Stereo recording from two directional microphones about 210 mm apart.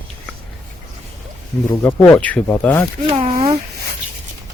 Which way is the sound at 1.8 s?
10° left (ahead or behind).